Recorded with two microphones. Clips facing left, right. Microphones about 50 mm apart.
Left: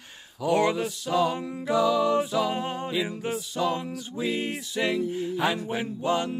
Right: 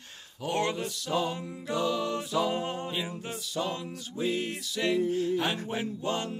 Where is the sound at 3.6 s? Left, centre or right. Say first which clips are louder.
Left 7 dB; left.